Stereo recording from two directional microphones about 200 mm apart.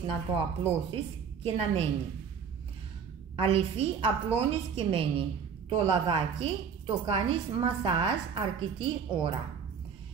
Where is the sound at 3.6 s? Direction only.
30° right (ahead or behind).